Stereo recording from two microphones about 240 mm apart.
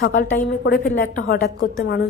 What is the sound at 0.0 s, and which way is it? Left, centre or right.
A woman's voice, left.